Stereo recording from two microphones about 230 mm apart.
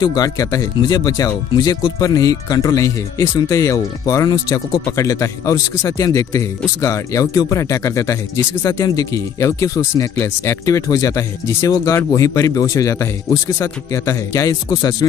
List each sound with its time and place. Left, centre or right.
0.0 s speech: centre